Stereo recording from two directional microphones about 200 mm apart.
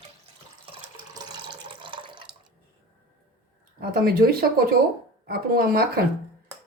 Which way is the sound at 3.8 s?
50° right (ahead or behind).